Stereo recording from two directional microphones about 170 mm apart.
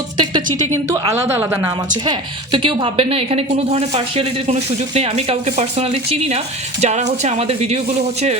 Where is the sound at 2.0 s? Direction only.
30° right (ahead or behind).